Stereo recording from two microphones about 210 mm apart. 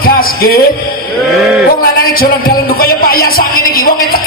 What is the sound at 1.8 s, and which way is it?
Speech, 45° left (ahead or behind).